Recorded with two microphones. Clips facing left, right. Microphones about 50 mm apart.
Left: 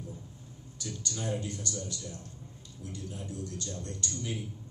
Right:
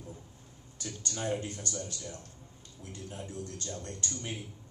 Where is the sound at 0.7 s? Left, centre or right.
Right.